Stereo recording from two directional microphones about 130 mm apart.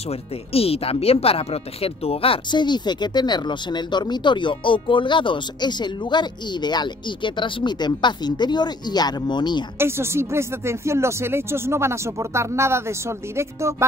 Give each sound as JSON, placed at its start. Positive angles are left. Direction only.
{"t": 0.5, "sound": "speech", "side_deg": 50}
{"t": 9.8, "sound": "speech", "side_deg": -20}